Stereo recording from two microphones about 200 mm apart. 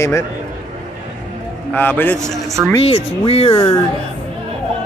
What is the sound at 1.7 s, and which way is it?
Speech, 10° left (ahead or behind).